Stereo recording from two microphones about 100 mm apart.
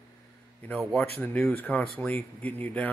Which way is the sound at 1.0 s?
15° left (ahead or behind).